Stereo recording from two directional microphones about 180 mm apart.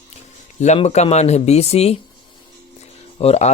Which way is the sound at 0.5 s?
40° left (ahead or behind).